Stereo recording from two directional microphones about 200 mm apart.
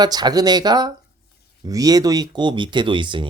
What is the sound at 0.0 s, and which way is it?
Speech, 20° right (ahead or behind).